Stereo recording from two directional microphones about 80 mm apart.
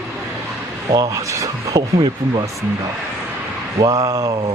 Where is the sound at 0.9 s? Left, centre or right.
Right.